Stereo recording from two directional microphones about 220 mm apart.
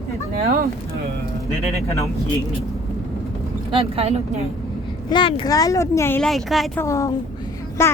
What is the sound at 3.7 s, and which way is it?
Speech, 25° right (ahead or behind).